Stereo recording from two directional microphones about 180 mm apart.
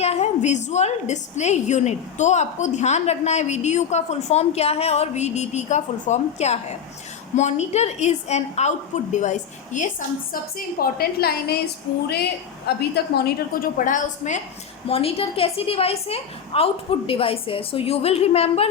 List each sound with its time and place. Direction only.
0.0 s a woman's voice: 35° left (ahead or behind)
10.6 s a woman's voice: 55° left (ahead or behind)
14.8 s a woman's voice: 30° left (ahead or behind)